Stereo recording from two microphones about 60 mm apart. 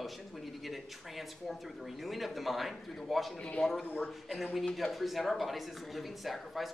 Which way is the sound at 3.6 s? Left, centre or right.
Centre.